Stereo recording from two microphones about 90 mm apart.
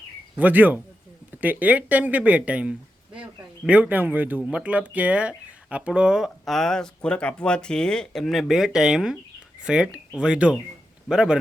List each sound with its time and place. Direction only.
0.3 s a man's voice: 20° right (ahead or behind)